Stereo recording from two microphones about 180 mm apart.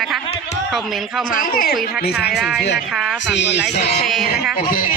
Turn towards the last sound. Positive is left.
turn(degrees=50)  # may be behind; listen again after turning